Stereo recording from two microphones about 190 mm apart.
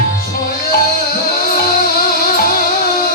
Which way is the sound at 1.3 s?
50° left (ahead or behind).